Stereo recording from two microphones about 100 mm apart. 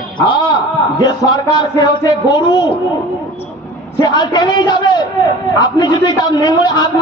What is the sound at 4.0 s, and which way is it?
A man's voice, 45° left (ahead or behind).